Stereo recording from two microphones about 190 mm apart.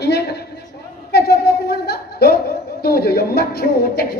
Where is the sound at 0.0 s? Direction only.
60° left (ahead or behind).